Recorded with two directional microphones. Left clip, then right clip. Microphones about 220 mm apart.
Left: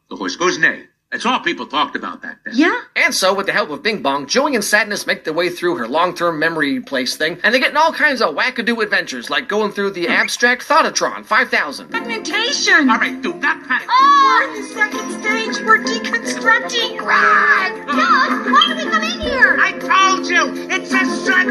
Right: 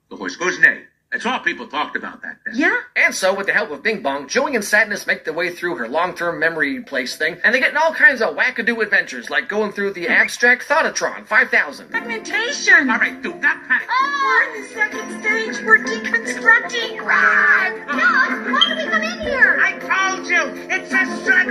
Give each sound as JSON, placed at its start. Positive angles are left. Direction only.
{"t": 0.2, "sound": "a man's voice", "side_deg": 45}